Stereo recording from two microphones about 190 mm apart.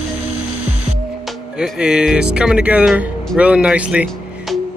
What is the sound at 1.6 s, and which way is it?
Speech, 5° right (ahead or behind).